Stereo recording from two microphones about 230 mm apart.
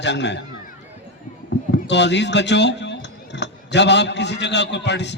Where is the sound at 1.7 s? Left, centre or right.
Left.